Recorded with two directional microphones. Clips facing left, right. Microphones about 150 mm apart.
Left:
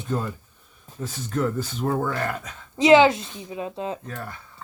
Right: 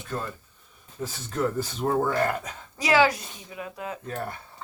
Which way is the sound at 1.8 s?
20° right (ahead or behind).